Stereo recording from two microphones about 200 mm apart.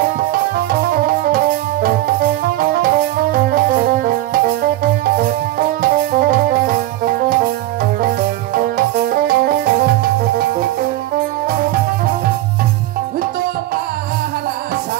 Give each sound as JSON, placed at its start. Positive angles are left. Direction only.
{"t": 0.3, "sound": "music", "side_deg": -50}
{"t": 8.5, "sound": "music", "side_deg": -45}